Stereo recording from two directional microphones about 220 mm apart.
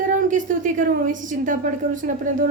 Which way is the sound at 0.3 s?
35° right (ahead or behind).